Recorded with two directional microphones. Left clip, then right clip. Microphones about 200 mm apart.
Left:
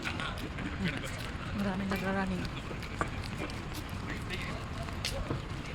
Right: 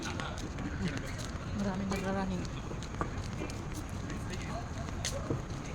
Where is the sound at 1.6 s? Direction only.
30° left (ahead or behind).